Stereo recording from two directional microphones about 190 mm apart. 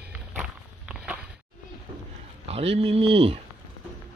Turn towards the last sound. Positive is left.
turn(degrees=-30)  # may be behind; listen again after turning